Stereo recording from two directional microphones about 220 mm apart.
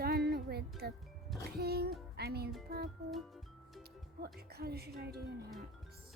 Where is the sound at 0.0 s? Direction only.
45° right (ahead or behind).